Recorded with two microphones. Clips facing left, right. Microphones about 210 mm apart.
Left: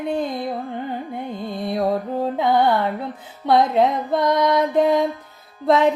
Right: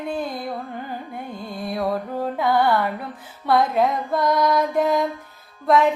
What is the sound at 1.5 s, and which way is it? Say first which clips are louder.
Speech: left 3 dB; 25° left (ahead or behind).